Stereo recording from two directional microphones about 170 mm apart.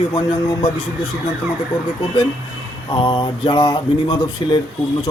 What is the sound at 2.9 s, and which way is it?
A man's voice, 30° left (ahead or behind).